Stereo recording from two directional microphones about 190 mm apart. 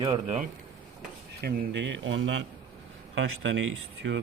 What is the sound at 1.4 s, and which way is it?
Speech, 65° right (ahead or behind).